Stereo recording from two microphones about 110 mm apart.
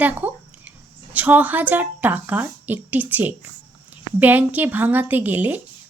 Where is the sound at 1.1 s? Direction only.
15° right (ahead or behind).